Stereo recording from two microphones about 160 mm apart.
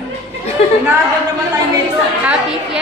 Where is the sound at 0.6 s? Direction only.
40° left (ahead or behind).